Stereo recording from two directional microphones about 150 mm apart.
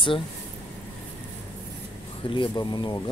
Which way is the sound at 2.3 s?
30° left (ahead or behind).